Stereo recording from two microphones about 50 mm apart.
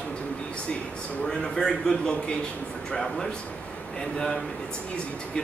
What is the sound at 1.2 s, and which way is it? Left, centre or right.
A man's voice, centre.